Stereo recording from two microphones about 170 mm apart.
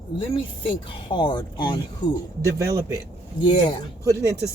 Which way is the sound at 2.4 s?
20° right (ahead or behind).